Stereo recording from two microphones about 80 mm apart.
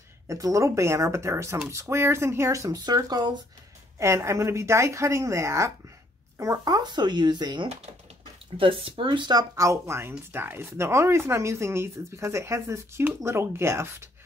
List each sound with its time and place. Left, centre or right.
0.3 s speech: right
3.0 s speech: right
4.0 s speech: right
8.5 s speech: right
9.6 s speech: right